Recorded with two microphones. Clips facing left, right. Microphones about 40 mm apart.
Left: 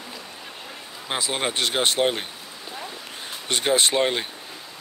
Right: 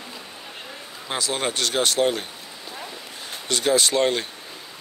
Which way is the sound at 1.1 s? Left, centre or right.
Centre.